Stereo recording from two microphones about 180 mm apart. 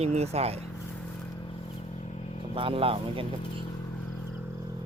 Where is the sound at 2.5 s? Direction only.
30° right (ahead or behind).